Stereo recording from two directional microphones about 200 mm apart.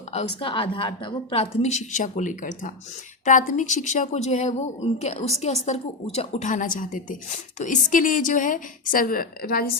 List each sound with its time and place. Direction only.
0.1 s a woman's voice: 30° left (ahead or behind); by 9.7 s 50° left (ahead or behind)